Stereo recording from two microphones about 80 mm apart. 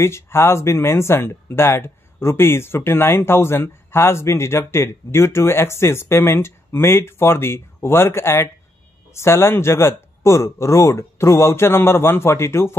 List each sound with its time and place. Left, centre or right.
0.0 s speech: left